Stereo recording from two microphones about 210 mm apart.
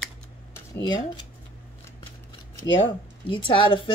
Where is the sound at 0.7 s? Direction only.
20° left (ahead or behind).